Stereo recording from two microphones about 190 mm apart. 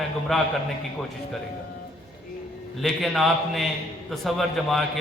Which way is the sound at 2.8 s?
Centre (ahead or behind).